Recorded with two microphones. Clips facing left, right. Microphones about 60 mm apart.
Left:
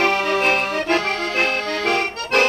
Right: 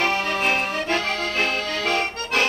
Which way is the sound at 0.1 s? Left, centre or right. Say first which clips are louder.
Left 4 dB; left.